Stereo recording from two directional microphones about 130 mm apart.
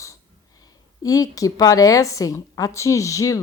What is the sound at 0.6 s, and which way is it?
A woman's voice, 30° left (ahead or behind).